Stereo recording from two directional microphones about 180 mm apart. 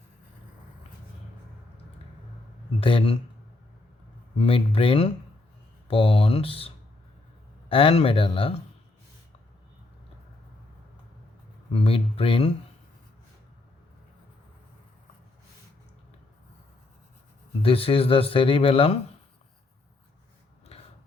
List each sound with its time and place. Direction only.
2.8 s speech: 30° left (ahead or behind)
4.4 s speech: 30° left (ahead or behind)
11.7 s speech: 30° left (ahead or behind)
17.6 s speech: 30° left (ahead or behind)
20.7 s biting: 35° left (ahead or behind)